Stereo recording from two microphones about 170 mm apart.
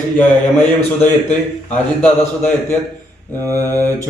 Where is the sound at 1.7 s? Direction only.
10° left (ahead or behind).